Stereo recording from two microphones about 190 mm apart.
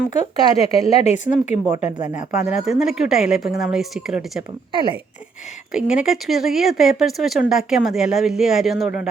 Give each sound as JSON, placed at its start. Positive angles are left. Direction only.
{"t": 0.1, "sound": "speech", "side_deg": 35}
{"t": 2.3, "sound": "speech", "side_deg": -5}
{"t": 5.7, "sound": "speech", "side_deg": -5}